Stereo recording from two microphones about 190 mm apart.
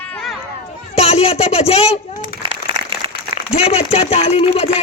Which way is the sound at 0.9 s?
30° left (ahead or behind).